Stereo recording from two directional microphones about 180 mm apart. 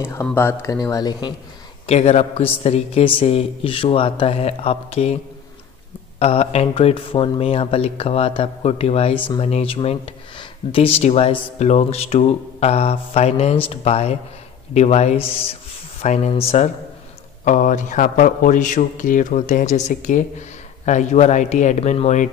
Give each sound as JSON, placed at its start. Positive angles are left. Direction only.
{"t": 0.0, "sound": "speech", "side_deg": 15}
{"t": 1.9, "sound": "a man's voice", "side_deg": 40}